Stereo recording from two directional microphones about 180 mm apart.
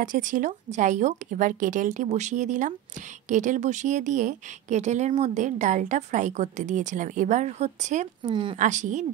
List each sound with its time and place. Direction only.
0.0 s a woman's voice: 45° right (ahead or behind)
8.2 s speech: 25° right (ahead or behind)
8.5 s a woman's voice: 45° right (ahead or behind)